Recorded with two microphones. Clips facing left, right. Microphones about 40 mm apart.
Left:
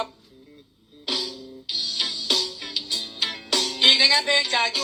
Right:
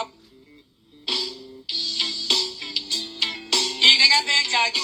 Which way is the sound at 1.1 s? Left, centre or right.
Right.